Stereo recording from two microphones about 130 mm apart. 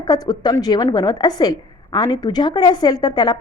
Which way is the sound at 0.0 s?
30° left (ahead or behind).